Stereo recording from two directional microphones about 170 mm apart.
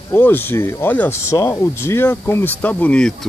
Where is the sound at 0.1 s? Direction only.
10° left (ahead or behind).